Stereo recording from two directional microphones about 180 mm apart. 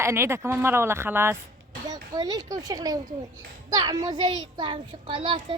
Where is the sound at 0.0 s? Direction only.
15° right (ahead or behind).